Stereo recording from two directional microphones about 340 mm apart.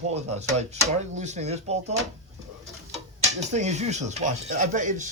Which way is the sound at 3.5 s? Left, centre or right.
Centre.